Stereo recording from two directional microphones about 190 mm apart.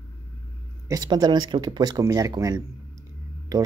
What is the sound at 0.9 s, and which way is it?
Speech, 20° right (ahead or behind).